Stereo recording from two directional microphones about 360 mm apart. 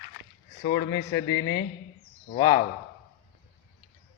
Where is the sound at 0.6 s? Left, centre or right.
Left.